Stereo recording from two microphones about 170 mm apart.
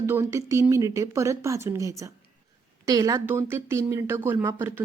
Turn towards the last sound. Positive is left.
turn(degrees=-15)  # may be behind; listen again after turning